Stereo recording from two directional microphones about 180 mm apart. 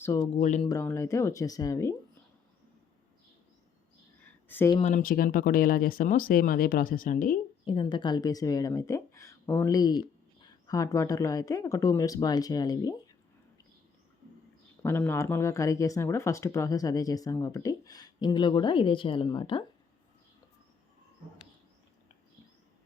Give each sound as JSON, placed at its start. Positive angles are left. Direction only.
{"t": 0.0, "sound": "speech", "side_deg": 15}
{"t": 0.3, "sound": "speech", "side_deg": 40}
{"t": 0.6, "sound": "speech", "side_deg": 20}
{"t": 4.4, "sound": "a sound", "side_deg": 10}
{"t": 4.8, "sound": "speech", "side_deg": 45}
{"t": 7.6, "sound": "speech", "side_deg": 30}
{"t": 14.8, "sound": "speech", "side_deg": 10}